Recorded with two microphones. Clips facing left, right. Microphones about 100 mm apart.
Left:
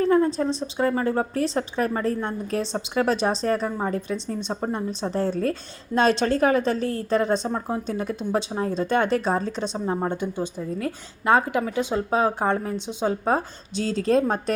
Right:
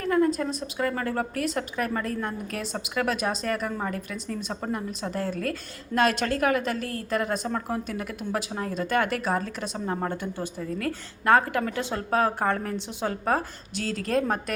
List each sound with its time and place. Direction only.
0.0 s a woman's voice: 25° left (ahead or behind)